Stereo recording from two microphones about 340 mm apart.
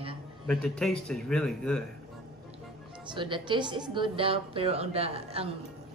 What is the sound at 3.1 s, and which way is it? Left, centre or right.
A woman's voice, centre.